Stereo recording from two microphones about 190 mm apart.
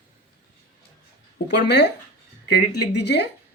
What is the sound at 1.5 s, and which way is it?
A man's voice, 65° left (ahead or behind).